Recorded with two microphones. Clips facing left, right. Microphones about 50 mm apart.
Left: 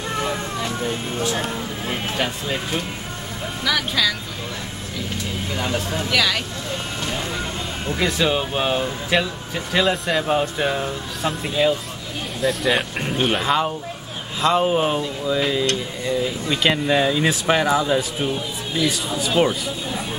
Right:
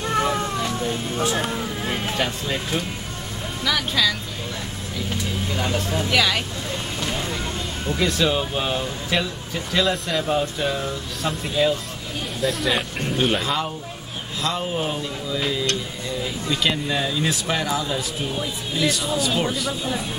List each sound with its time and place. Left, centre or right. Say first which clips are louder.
0.2 s cat: right 2 dB; centre
0.7 s speech: even; centre
1.3 s speech: right 1 dB; centre
5.5 s speech: left 1 dB; centre
6.0 s speech: even; centre
7.1 s vehicle: left 1 dB; centre
7.9 s speech: left 1 dB; centre
12.4 s speech: left 3 dB; centre
13.2 s speech: left 3 dB; centre
14.5 s speech: left 8 dB; left
15.0 s speech: left 5 dB; centre
16.8 s speech: left 5 dB; left